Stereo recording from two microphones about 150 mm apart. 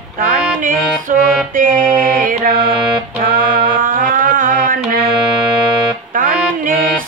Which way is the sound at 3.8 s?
65° right (ahead or behind).